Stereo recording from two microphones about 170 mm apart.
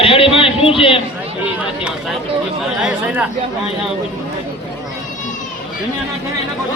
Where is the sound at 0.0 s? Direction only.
35° left (ahead or behind).